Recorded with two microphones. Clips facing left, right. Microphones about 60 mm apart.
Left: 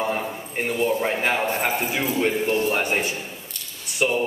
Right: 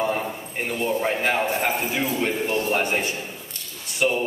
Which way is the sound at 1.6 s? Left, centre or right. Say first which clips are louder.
Even; left.